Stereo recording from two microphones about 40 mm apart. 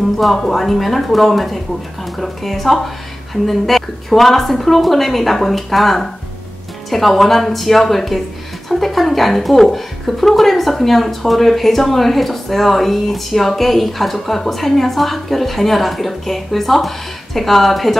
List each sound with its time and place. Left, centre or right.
0.2 s speech: centre